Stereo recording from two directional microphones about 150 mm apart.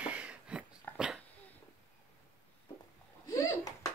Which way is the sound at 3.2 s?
25° left (ahead or behind).